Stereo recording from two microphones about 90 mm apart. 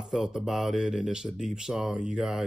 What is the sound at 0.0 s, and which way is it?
Speech, 5° right (ahead or behind).